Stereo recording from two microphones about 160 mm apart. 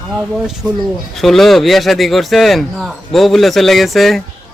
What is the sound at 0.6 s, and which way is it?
Speech, 15° right (ahead or behind).